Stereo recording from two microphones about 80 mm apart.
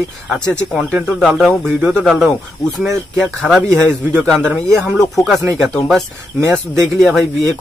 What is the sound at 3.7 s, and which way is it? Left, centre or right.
Speech, right.